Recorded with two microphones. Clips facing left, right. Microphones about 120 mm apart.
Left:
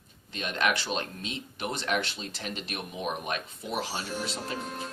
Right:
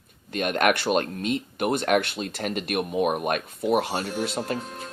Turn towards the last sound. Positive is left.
turn(degrees=-55)  # may be behind; listen again after turning